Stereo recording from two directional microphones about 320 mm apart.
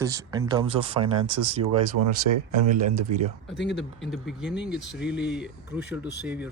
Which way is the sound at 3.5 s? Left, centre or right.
Left.